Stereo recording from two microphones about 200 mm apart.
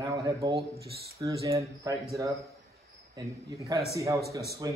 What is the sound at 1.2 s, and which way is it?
Speech, 15° right (ahead or behind).